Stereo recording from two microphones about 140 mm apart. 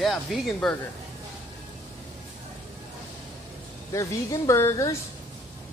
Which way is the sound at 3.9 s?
20° left (ahead or behind).